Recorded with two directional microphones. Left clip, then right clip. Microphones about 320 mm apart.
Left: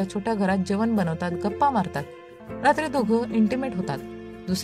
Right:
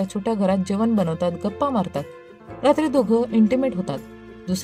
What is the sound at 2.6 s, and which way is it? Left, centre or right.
Speech, left.